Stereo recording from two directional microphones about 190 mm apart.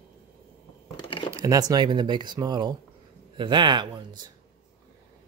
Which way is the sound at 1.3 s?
15° right (ahead or behind).